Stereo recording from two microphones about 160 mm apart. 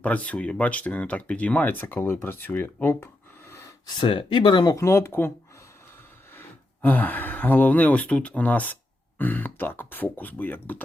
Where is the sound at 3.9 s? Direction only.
30° left (ahead or behind).